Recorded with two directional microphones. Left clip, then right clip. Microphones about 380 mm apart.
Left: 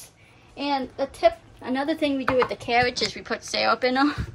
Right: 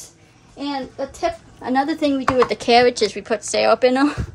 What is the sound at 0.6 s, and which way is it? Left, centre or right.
Speech, centre.